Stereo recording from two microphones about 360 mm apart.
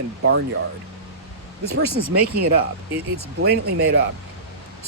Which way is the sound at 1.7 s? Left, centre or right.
Right.